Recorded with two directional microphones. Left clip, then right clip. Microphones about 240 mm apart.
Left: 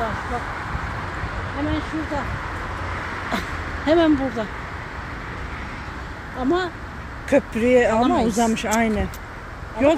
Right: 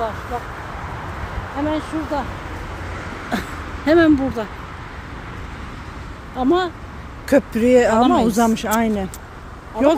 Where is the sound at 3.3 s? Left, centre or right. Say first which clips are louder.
Even; right.